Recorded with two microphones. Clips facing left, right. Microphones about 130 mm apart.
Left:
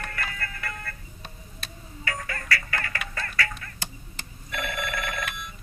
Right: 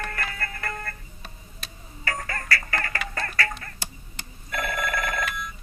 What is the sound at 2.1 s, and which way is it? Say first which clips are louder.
Music: right 1 dB; 40° right (ahead or behind).